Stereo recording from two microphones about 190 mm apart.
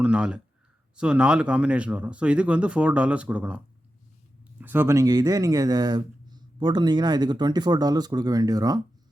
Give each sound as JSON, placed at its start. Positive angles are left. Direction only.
{"t": 0.0, "sound": "speech", "side_deg": -5}
{"t": 4.6, "sound": "speech", "side_deg": -10}